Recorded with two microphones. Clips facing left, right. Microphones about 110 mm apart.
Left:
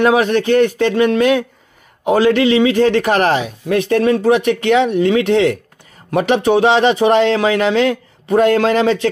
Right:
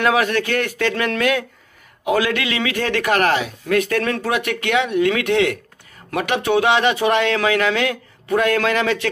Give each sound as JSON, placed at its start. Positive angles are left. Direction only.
{"t": 0.0, "sound": "a man's voice", "side_deg": 25}